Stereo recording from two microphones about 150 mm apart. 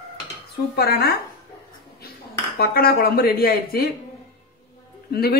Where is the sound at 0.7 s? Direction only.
90° left.